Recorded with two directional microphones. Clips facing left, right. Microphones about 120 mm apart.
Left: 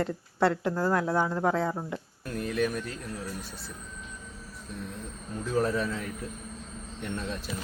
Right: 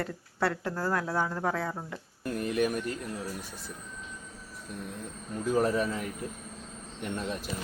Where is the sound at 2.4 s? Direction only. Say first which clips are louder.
Even; 10° right (ahead or behind).